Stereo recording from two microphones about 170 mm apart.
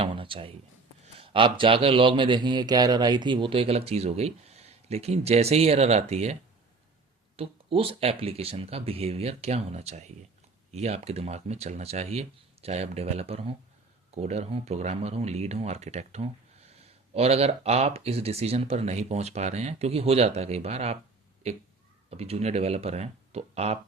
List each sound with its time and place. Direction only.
0.0 s a sound: 30° right (ahead or behind)
1.0 s speech: 30° right (ahead or behind)
7.3 s speech: 35° right (ahead or behind)